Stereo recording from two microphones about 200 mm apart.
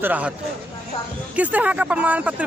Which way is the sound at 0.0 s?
10° right (ahead or behind).